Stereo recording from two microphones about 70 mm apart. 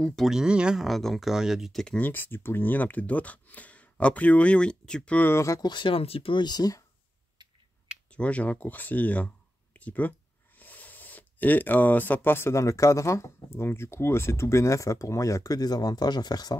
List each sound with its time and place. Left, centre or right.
0.0 s speech: centre
0.3 s speech: centre
0.8 s speech: centre
2.0 s speech: left; by 5.2 s centre
5.2 s speech: left
5.6 s speech: left
8.1 s speech: centre; by 16.5 s left